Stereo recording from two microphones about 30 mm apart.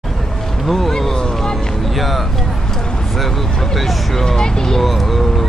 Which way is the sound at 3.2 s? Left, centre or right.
Centre.